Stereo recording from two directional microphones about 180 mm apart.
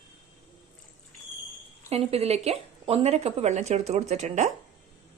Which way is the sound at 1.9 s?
35° right (ahead or behind).